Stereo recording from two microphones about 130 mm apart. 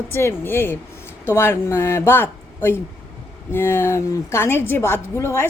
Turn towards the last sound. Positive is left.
turn(degrees=20)  # may be behind; listen again after turning